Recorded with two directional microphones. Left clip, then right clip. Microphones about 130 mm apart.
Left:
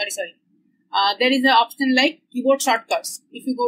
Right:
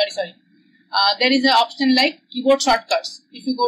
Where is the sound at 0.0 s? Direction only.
40° left (ahead or behind).